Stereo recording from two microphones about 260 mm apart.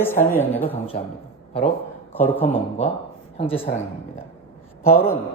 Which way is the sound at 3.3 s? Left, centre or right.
Left.